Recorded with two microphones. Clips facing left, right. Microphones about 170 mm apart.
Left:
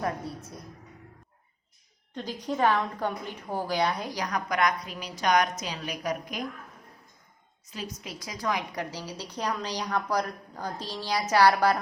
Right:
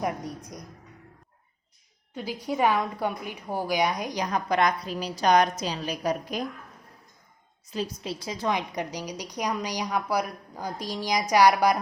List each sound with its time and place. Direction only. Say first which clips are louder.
0.0 s a woman's voice: right 1 dB; 15° right (ahead or behind)
2.1 s a woman's voice: right 1 dB; 10° right (ahead or behind); by 6.4 s 30° right (ahead or behind)
7.7 s a woman's voice: right 7 dB; 30° right (ahead or behind); by 11.8 s 15° right (ahead or behind)